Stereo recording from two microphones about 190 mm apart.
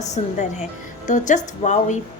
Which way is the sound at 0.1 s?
40° left (ahead or behind).